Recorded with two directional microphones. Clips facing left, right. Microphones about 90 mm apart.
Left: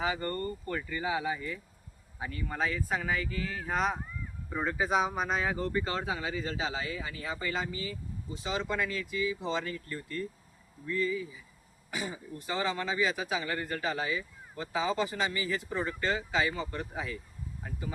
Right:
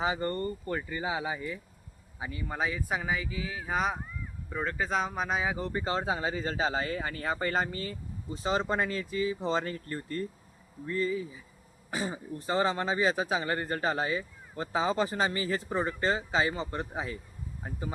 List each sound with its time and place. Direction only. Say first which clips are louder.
0.0 s speech: right 2 dB; 25° right (ahead or behind); by 5.4 s centre (ahead or behind)
5.4 s speech: left 1 dB; 15° right (ahead or behind); by 17.9 s 35° right (ahead or behind)